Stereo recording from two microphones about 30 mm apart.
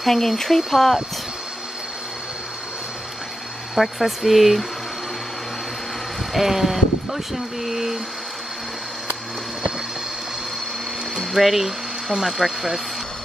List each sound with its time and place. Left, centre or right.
0.0 s speech: centre
3.7 s speech: centre
6.3 s speech: centre
11.1 s speech: centre